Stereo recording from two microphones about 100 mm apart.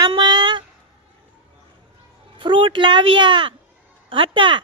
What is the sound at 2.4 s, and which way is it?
Speech, 55° right (ahead or behind).